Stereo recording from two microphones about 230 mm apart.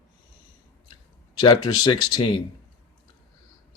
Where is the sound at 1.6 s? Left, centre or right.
Centre.